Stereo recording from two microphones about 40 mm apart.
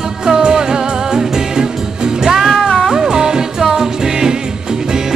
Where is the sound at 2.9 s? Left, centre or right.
Centre.